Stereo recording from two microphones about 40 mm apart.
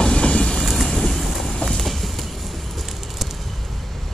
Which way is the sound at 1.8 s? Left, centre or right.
Centre.